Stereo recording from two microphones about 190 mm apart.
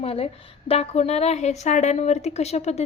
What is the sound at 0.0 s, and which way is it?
A woman's voice, 30° left (ahead or behind).